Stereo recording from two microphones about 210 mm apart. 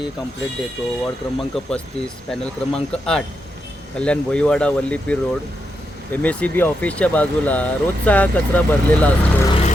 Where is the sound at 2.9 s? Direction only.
5° left (ahead or behind).